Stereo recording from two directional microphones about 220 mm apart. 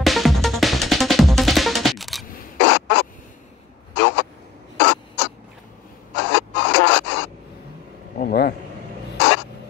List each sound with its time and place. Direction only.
0.0 s music: centre (ahead or behind)
2.2 s rodents: 45° left (ahead or behind)
3.9 s a sound: 50° left (ahead or behind)
4.7 s crow: 50° left (ahead or behind)
6.1 s printer: 50° left (ahead or behind)
8.2 s a sound: 45° left (ahead or behind)
9.2 s crow: 50° left (ahead or behind)